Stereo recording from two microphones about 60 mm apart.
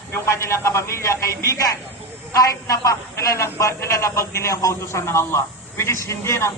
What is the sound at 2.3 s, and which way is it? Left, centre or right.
A man's voice, left.